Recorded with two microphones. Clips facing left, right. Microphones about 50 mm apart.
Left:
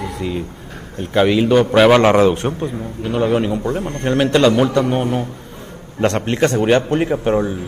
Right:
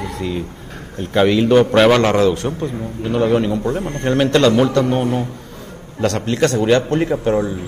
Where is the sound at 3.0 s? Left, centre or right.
Centre.